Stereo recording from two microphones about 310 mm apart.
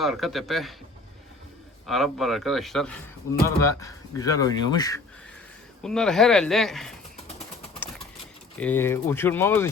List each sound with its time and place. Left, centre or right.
0.0 s speech: centre
1.9 s speech: centre
5.8 s speech: centre
8.6 s speech: centre